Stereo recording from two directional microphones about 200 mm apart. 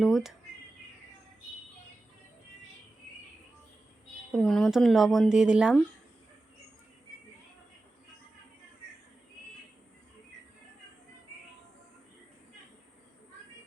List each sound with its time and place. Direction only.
0.0 s speech: centre (ahead or behind)
4.3 s speech: centre (ahead or behind)